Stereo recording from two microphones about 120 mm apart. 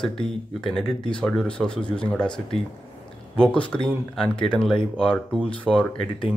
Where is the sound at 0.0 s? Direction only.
5° left (ahead or behind).